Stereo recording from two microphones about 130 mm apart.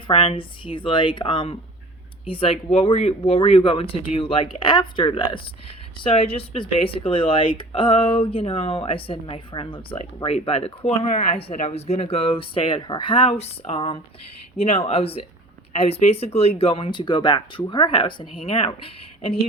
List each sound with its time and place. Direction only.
0.1 s speech: 45° left (ahead or behind)